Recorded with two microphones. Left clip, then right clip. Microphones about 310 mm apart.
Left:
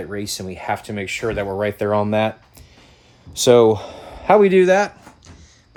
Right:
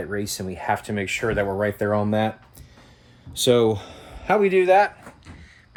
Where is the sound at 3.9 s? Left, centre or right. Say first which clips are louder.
Left 7 dB; left.